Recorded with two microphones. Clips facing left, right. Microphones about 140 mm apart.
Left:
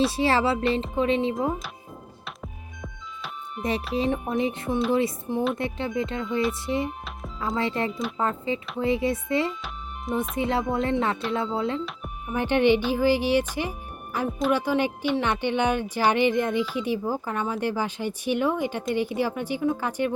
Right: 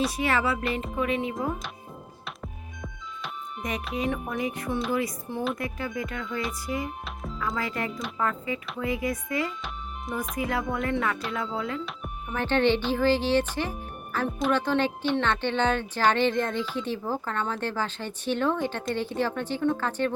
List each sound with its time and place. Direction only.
0.1 s speech: 30° left (ahead or behind)
2.2 s music: centre (ahead or behind)
3.6 s speech: 30° left (ahead or behind)
7.0 s music: centre (ahead or behind)
7.3 s speech: 25° left (ahead or behind)
9.5 s music: centre (ahead or behind)
10.3 s speech: 25° left (ahead or behind)
12.3 s speech: 15° left (ahead or behind)